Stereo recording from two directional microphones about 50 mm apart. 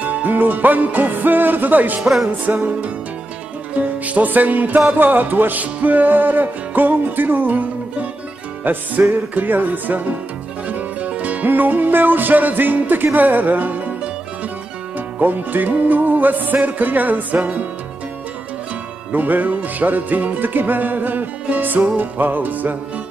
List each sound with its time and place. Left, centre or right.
0.0 s music: right
2.0 s music: centre
2.2 s music: right
4.0 s music: right
15.1 s music: right
19.1 s music: right